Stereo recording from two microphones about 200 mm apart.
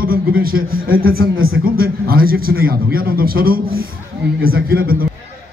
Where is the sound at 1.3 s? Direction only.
85° right.